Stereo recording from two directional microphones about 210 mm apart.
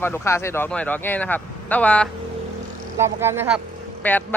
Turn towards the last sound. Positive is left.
turn(degrees=10)  # may be behind; listen again after turning